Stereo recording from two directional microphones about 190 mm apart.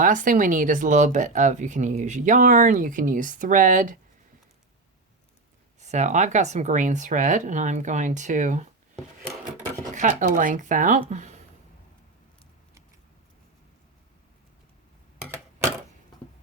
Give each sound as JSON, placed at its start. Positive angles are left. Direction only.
{"t": 0.0, "sound": "speech", "side_deg": -45}
{"t": 5.8, "sound": "speech", "side_deg": -40}
{"t": 9.9, "sound": "speech", "side_deg": -40}
{"t": 11.1, "sound": "a sound", "side_deg": -40}